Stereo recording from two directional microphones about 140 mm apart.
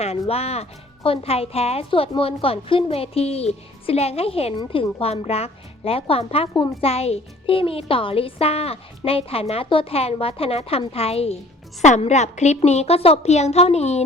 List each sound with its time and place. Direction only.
0.0 s a woman's voice: 45° left (ahead or behind)